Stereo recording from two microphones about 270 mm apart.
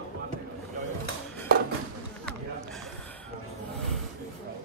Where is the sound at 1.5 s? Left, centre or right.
Right.